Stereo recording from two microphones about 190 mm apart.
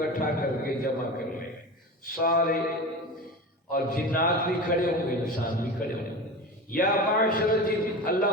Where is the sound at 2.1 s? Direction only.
50° left (ahead or behind).